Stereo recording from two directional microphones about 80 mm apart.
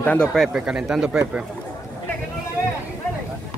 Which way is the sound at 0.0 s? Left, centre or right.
Left.